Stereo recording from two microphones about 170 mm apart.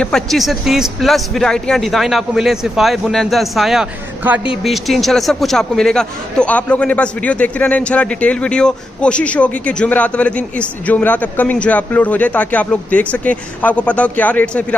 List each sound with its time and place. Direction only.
0.0 s a man's voice: centre (ahead or behind)
4.6 s a man's voice: centre (ahead or behind)